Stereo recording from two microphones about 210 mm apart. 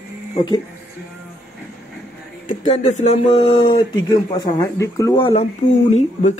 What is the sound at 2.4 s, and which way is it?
Speech, 30° left (ahead or behind).